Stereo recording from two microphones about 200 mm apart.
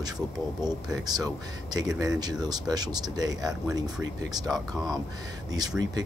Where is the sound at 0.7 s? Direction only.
20° right (ahead or behind).